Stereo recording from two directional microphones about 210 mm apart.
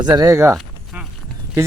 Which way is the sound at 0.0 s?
20° right (ahead or behind).